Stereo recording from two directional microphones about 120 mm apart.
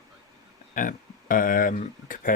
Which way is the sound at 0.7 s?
90° left.